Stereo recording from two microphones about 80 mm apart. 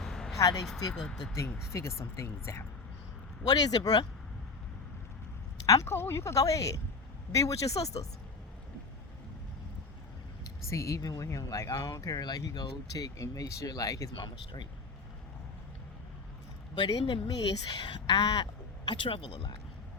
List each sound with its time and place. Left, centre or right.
0.0 s a sound: centre
0.3 s speech: left
0.9 s speech: centre
1.7 s speech: left
3.4 s speech: left
5.6 s speech: left
10.7 s speech: left
12.2 s speech: left
14.2 s speech: left
16.7 s speech: left
18.9 s speech: left